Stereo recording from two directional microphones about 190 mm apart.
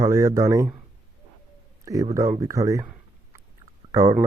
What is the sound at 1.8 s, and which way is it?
Speech, 15° right (ahead or behind).